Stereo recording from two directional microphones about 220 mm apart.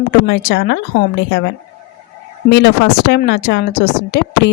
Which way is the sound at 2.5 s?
50° left (ahead or behind).